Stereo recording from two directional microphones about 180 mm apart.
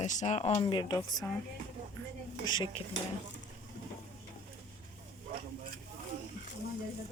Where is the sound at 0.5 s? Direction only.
25° left (ahead or behind).